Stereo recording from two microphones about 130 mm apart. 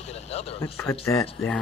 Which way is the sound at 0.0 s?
55° left (ahead or behind).